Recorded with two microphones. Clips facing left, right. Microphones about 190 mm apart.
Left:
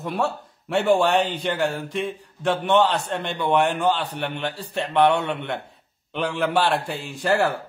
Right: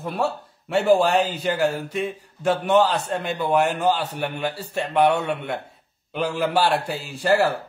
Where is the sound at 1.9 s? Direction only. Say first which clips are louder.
Right 1 dB; 10° right (ahead or behind).